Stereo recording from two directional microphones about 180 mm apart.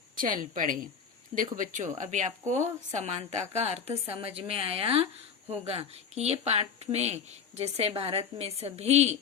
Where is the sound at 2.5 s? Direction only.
15° right (ahead or behind).